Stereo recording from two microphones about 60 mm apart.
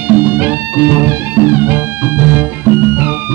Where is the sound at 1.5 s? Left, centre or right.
Right.